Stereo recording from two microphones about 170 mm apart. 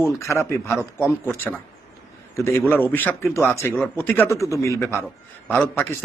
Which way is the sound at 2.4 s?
15° left (ahead or behind).